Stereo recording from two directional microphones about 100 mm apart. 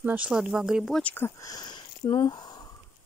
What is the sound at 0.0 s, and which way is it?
Speech, 15° right (ahead or behind).